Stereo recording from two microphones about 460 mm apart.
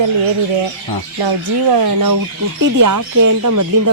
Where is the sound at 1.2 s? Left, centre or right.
Right.